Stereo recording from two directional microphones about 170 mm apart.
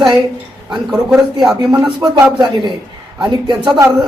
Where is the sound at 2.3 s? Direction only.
25° right (ahead or behind).